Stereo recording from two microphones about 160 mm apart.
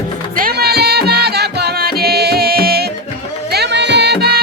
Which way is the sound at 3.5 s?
90° right.